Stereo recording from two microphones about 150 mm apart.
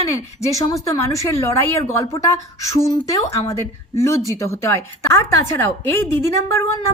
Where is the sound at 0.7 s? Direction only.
20° left (ahead or behind).